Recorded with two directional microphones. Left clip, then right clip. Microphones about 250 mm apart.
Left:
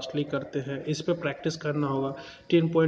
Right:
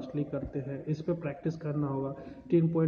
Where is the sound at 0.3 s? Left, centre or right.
Centre.